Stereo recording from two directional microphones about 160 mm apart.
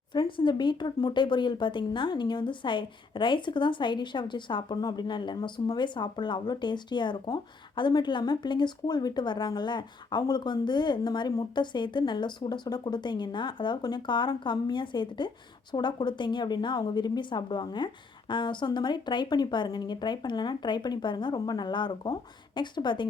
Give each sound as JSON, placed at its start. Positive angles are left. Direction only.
{"t": 0.1, "sound": "speech", "side_deg": 30}